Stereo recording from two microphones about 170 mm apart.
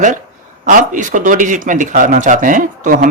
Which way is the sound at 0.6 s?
50° right (ahead or behind).